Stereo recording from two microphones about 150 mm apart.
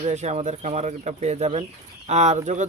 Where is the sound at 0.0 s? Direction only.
50° right (ahead or behind).